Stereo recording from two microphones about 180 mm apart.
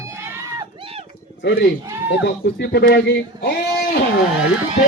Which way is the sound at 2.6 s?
60° left (ahead or behind).